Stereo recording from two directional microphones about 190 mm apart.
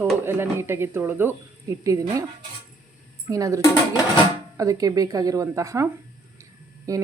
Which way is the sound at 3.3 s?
20° right (ahead or behind).